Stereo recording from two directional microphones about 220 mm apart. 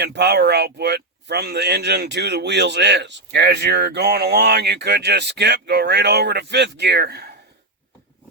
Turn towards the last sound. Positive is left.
turn(degrees=-50)  # may be behind; listen again after turning